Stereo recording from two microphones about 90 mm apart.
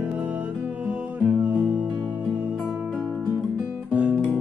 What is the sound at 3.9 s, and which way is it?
Guitar, 15° right (ahead or behind).